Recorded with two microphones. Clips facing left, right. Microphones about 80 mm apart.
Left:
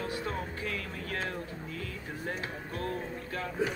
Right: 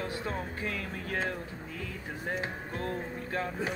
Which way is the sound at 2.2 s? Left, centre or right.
Right.